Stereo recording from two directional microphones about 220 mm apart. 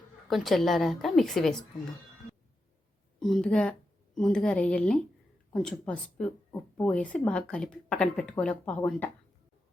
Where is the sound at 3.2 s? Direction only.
Centre (ahead or behind).